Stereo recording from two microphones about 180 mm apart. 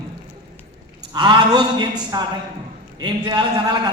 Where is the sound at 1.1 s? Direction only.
25° right (ahead or behind).